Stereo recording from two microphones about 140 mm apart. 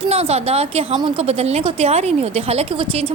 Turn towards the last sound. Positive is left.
turn(degrees=-40)  # may be behind; listen again after turning